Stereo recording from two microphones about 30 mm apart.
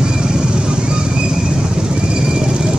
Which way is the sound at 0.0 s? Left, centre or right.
Right.